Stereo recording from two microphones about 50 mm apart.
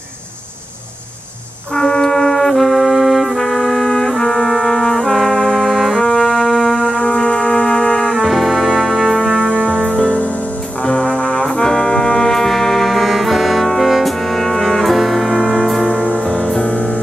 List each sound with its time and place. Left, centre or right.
1.7 s brass instrument: centre
5.9 s music: centre
9.5 s music: centre
11.1 s brass instrument: centre
16.0 s music: centre